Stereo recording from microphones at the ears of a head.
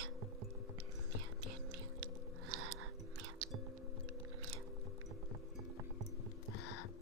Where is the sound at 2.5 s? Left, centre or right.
Right.